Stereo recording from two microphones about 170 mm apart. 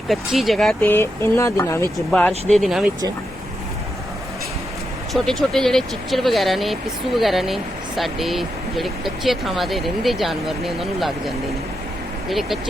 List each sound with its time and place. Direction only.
0.1 s speech: centre (ahead or behind); by 1.9 s 15° left (ahead or behind)
2.0 s speech: 5° left (ahead or behind)
5.1 s speech: centre (ahead or behind)